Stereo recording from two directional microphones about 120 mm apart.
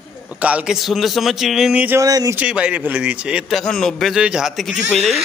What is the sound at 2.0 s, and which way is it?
Speech, 30° right (ahead or behind).